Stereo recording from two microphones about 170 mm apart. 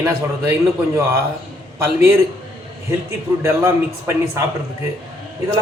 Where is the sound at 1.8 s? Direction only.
15° right (ahead or behind).